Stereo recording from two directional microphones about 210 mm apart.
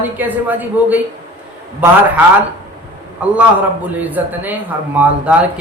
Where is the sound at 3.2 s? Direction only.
5° right (ahead or behind).